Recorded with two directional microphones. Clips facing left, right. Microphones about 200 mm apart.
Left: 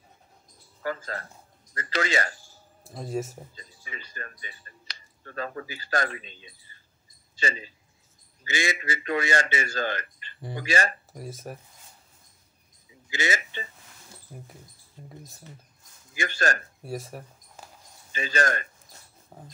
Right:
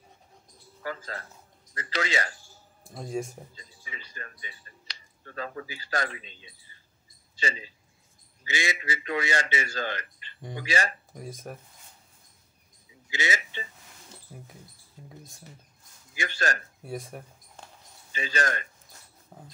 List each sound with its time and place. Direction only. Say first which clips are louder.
0.8 s a man's voice: left 4 dB; 50° left (ahead or behind)
2.8 s speech: left 1 dB; centre (ahead or behind)
3.5 s speech: left 2 dB; 50° left (ahead or behind)
6.7 s mouse: left 1 dB; 50° left (ahead or behind)
7.3 s a man's voice: left 2 dB; 50° left (ahead or behind)
11.1 s speech: left 1 dB; 5° left (ahead or behind)
13.1 s a man's voice: left 2 dB; 50° left (ahead or behind)
15.0 s mouse: left 2 dB; 5° right (ahead or behind)
16.2 s a man's voice: left 3 dB; 50° left (ahead or behind)
16.8 s a sound: left 1 dB; centre (ahead or behind)
18.1 s a man's voice: left 3 dB; 50° left (ahead or behind)